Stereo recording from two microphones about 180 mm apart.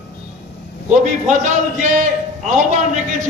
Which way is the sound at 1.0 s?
45° right (ahead or behind).